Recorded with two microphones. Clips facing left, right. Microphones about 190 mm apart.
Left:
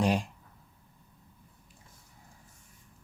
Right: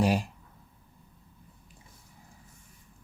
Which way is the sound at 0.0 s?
5° right (ahead or behind).